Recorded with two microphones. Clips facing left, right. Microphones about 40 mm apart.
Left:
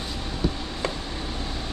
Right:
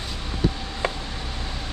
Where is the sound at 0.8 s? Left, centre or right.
Right.